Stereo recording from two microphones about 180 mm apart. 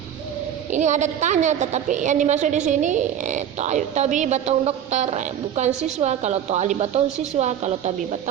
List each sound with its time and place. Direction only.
0.7 s a woman's voice: 40° right (ahead or behind)